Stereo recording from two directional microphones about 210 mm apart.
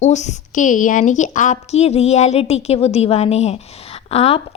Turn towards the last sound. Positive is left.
turn(degrees=30)  # may be behind; listen again after turning